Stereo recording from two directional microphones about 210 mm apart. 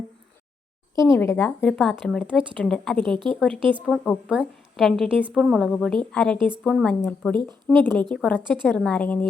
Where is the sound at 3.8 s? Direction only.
Centre (ahead or behind).